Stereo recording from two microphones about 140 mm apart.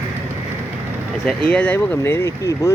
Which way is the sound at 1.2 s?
10° left (ahead or behind).